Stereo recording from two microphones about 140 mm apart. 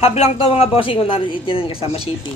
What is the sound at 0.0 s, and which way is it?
Speech, 50° left (ahead or behind).